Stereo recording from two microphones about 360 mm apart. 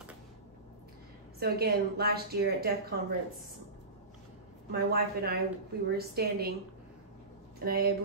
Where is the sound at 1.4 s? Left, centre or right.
Right.